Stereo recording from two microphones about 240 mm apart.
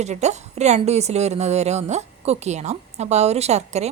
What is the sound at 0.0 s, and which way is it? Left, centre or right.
A woman's voice, right.